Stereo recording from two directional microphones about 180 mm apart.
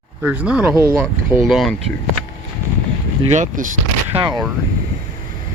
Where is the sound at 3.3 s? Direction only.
45° right (ahead or behind).